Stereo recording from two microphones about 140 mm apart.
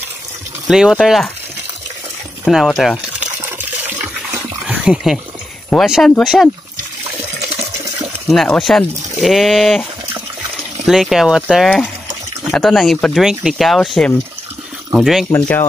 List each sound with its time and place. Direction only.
0.7 s speech: 5° right (ahead or behind)
2.5 s speech: centre (ahead or behind)
3.0 s liquid: 10° right (ahead or behind)
4.6 s speech: 5° right (ahead or behind)
7.5 s water: 20° right (ahead or behind)
8.3 s speech: centre (ahead or behind)
10.9 s speech: centre (ahead or behind)
15.3 s speech: 15° left (ahead or behind)